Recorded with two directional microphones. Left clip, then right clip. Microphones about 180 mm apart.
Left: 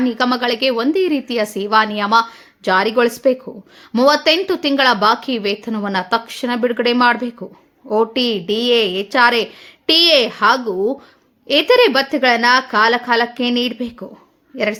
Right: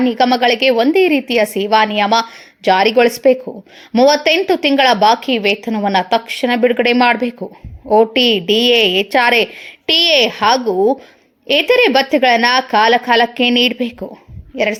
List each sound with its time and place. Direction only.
0.0 s a woman's voice: 10° right (ahead or behind)